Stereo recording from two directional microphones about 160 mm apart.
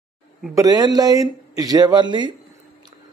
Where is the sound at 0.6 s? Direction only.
25° right (ahead or behind).